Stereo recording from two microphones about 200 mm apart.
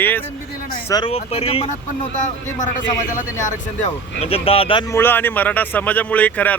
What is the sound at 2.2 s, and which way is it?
A man's voice, 40° left (ahead or behind).